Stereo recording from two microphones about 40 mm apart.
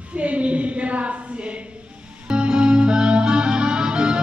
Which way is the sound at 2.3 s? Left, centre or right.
Right.